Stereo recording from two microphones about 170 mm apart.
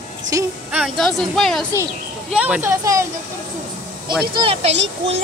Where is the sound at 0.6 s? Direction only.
5° right (ahead or behind).